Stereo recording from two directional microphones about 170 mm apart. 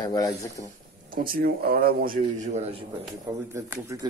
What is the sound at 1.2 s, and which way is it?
Speech, 60° right (ahead or behind).